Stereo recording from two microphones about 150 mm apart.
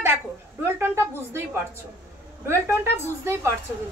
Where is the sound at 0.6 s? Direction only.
15° right (ahead or behind).